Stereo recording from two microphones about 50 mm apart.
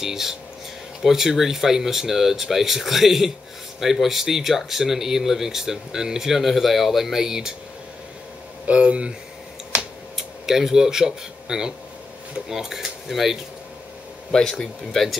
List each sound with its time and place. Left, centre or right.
0.0 s speech: centre
8.6 s speech: right
10.1 s speech: centre
14.3 s speech: centre